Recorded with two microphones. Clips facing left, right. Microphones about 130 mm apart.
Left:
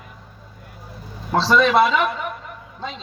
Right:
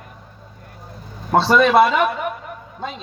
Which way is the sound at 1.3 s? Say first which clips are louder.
Right 3 dB; 55° right (ahead or behind).